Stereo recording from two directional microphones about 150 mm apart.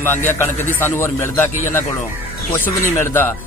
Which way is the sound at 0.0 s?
15° left (ahead or behind).